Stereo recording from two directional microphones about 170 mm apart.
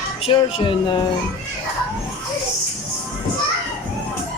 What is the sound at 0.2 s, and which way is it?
Speech, 30° left (ahead or behind).